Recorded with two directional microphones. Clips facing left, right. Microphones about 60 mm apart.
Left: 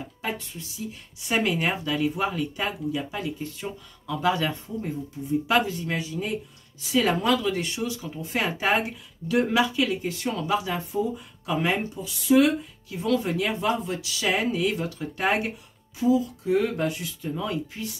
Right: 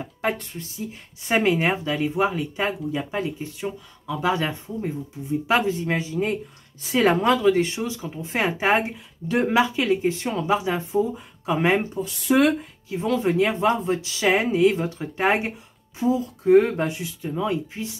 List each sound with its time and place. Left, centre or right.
0.0 s speech: right
11.9 s speech: right
12.9 s speech: right